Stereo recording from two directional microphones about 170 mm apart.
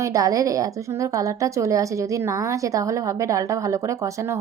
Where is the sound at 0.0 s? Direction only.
20° right (ahead or behind).